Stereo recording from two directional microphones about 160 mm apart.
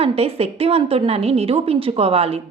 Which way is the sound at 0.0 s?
40° right (ahead or behind).